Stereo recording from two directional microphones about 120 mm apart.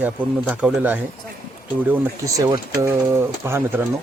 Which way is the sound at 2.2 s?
30° right (ahead or behind).